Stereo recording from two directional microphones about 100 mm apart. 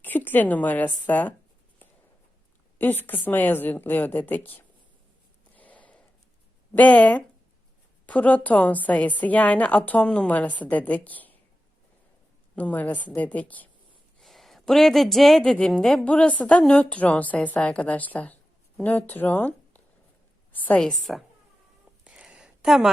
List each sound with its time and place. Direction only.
0.0 s a woman's voice: 20° left (ahead or behind)
2.7 s a woman's voice: 20° left (ahead or behind)
5.5 s a sound: 15° left (ahead or behind)
6.7 s a woman's voice: 15° left (ahead or behind)
12.5 s a woman's voice: 15° left (ahead or behind)
14.2 s a woman's voice: centre (ahead or behind)
22.0 s a sound: 5° right (ahead or behind)